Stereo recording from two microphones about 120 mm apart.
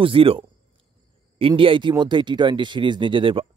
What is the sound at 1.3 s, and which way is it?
Speech, 50° right (ahead or behind).